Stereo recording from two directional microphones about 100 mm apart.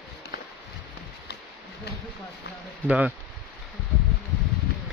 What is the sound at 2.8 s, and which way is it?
Speech, 15° right (ahead or behind).